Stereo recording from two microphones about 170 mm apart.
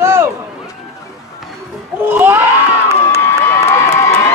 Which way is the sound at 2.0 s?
10° right (ahead or behind).